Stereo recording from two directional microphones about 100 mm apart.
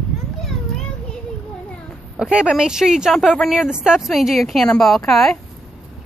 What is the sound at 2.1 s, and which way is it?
A woman's voice, 10° right (ahead or behind).